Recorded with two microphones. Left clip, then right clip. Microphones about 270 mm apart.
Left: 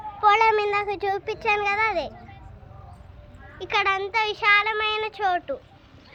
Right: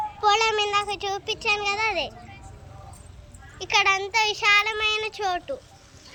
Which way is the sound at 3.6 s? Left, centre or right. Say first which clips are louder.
Right 2 dB; centre.